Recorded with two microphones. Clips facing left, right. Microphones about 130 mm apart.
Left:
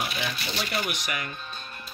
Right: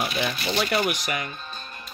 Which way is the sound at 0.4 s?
55° right (ahead or behind).